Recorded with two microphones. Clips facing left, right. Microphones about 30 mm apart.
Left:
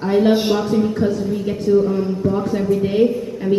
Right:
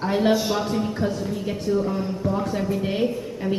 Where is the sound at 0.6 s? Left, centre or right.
Centre.